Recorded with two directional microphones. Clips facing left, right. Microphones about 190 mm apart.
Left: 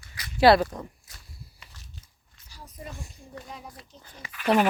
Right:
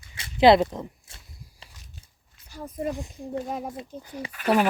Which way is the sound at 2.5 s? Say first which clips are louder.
Right 12 dB; 55° right (ahead or behind).